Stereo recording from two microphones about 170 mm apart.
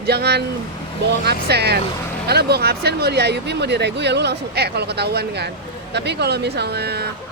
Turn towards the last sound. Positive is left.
turn(degrees=-70)  # may be behind; listen again after turning